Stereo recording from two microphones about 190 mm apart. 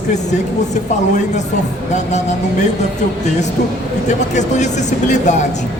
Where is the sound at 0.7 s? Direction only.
40° left (ahead or behind).